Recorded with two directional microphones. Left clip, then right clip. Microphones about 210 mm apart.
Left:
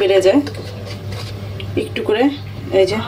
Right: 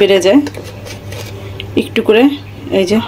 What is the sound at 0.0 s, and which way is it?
Speech, 45° right (ahead or behind).